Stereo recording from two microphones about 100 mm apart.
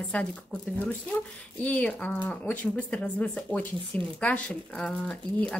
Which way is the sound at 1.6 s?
15° left (ahead or behind).